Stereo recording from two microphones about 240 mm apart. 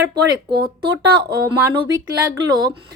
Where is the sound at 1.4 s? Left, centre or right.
Centre.